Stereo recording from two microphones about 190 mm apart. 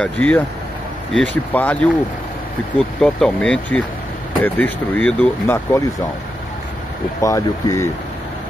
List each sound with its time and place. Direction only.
0.0 s speech: 5° left (ahead or behind)
3.0 s speech: 5° left (ahead or behind)
7.2 s speech: 15° left (ahead or behind)